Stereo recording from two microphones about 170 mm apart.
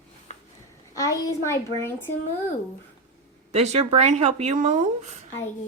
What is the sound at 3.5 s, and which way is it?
Speech, 40° right (ahead or behind).